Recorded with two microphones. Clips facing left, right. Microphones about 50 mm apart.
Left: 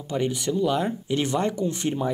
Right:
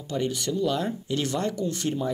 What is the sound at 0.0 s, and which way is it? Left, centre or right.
Speech, centre.